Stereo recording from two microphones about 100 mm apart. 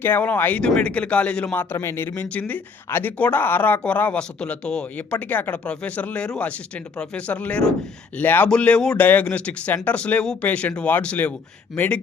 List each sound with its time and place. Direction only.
0.0 s speech: 15° left (ahead or behind)
1.7 s speech: 25° left (ahead or behind)
2.3 s speech: 15° left (ahead or behind)